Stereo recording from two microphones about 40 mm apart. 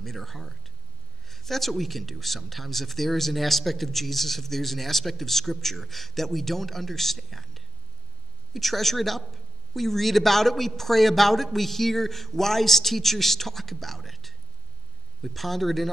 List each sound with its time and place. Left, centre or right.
0.0 s speech: centre